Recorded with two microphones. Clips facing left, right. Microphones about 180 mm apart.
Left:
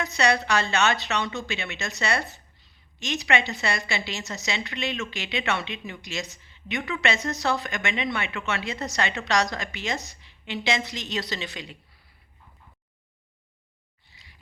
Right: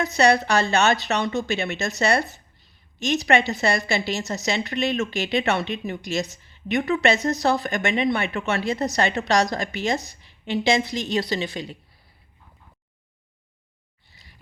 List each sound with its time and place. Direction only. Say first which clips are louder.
0.0 s a woman's voice: right 5 dB; 35° right (ahead or behind)